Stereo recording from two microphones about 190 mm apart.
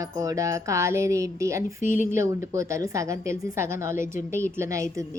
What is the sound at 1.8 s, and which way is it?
Speech, 45° left (ahead or behind).